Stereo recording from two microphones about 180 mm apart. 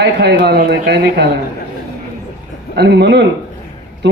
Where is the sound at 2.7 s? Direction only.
70° right (ahead or behind).